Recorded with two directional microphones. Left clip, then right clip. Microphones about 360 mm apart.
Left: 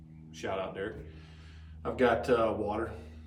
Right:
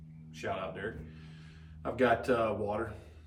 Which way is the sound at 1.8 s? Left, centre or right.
Centre.